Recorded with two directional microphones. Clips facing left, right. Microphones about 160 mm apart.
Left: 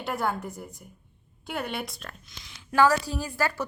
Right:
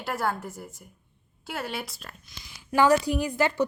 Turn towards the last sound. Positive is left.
turn(degrees=-20)  # may be behind; listen again after turning